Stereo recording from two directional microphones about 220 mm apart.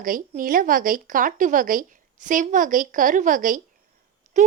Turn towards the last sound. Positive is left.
turn(degrees=-35)  # may be behind; listen again after turning